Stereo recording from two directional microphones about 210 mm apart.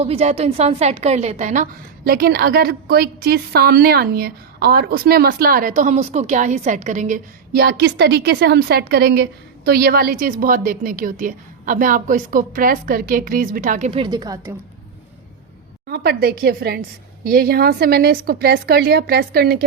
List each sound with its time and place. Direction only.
0.0 s a woman's voice: 30° right (ahead or behind)
2.0 s a woman's voice: 45° right (ahead or behind)
14.0 s a woman's voice: 20° right (ahead or behind)
15.9 s a woman's voice: 50° right (ahead or behind)